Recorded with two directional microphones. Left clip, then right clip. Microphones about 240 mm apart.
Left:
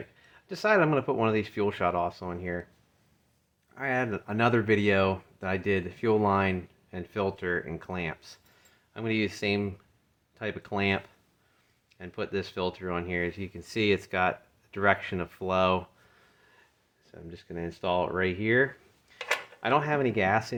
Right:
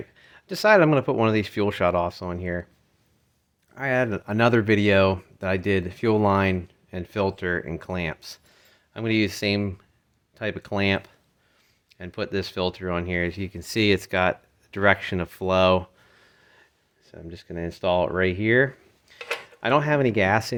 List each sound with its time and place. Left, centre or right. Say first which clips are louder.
0.2 s speech: right 7 dB; right
3.8 s speech: right 6 dB; right